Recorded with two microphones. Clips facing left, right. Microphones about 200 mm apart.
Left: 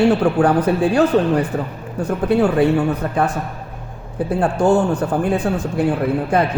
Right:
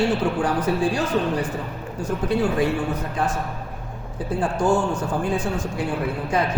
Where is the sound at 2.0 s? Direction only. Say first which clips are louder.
Left 6 dB; 60° left (ahead or behind).